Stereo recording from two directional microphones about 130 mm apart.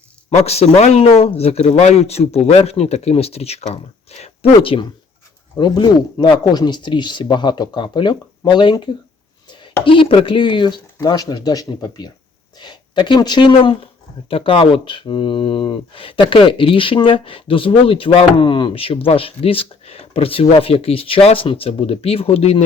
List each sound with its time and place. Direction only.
0.3 s speech: 55° left (ahead or behind)